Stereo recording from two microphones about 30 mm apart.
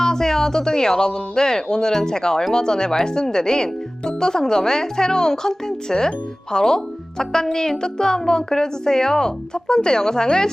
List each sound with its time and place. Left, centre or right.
0.0 s speech: centre